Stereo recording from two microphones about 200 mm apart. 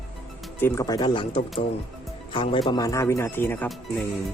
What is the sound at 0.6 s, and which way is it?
Speech, 15° left (ahead or behind).